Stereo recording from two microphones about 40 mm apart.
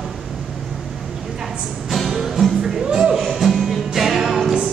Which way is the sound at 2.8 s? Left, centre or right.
Right.